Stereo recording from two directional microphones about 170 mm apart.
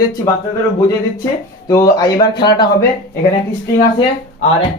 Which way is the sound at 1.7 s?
20° left (ahead or behind).